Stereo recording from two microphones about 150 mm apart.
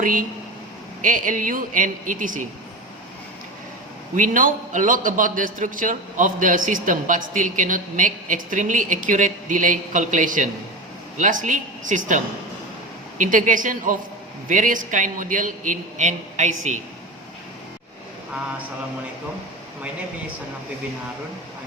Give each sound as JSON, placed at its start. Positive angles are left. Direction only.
{"t": 0.0, "sound": "a man's voice", "side_deg": -65}
{"t": 4.1, "sound": "a man's voice", "side_deg": -60}